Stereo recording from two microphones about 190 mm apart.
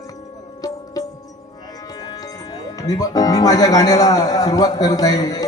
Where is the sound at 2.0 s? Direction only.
20° left (ahead or behind).